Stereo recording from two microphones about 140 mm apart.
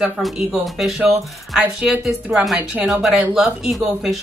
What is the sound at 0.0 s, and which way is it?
A woman's voice, centre (ahead or behind).